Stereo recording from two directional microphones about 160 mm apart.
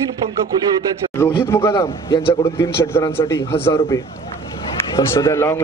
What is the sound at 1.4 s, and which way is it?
Speech, 15° left (ahead or behind).